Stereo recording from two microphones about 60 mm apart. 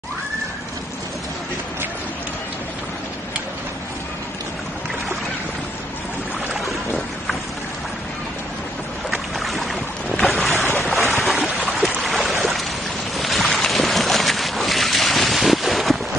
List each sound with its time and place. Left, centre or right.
9.1 s boat: centre
10.5 s boat: right
10.8 s boat: centre
11.4 s a sound: right
12.0 s a sound: centre
13.2 s boat: centre